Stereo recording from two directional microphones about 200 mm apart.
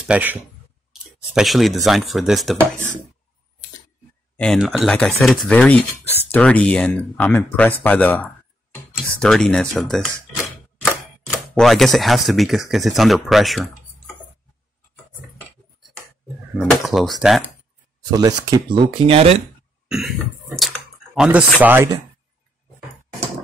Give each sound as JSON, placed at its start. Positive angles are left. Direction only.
{"t": 0.0, "sound": "speech", "side_deg": -5}
{"t": 4.4, "sound": "speech", "side_deg": 0}
{"t": 16.5, "sound": "speech", "side_deg": 0}
{"t": 18.1, "sound": "speech", "side_deg": -15}
{"t": 19.0, "sound": "speech", "side_deg": -30}
{"t": 19.9, "sound": "speech", "side_deg": 0}